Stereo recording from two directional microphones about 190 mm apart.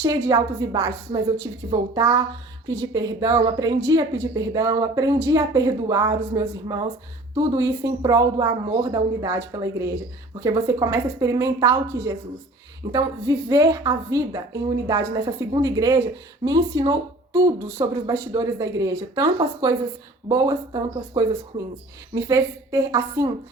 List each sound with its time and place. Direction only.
0.0 s a woman's voice: 15° right (ahead or behind)